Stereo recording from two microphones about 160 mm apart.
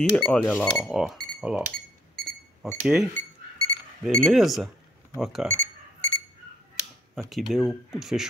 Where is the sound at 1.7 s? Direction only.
70° right (ahead or behind).